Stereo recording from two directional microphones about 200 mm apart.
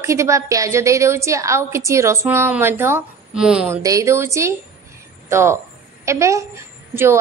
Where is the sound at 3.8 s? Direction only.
15° right (ahead or behind).